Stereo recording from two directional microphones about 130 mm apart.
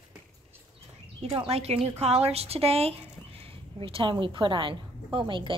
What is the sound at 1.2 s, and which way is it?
A woman's voice, 50° right (ahead or behind).